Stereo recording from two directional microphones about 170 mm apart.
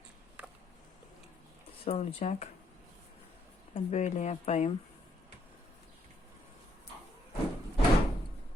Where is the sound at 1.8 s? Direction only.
35° left (ahead or behind).